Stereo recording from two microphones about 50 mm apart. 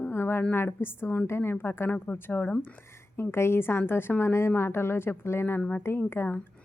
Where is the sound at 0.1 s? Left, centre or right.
Left.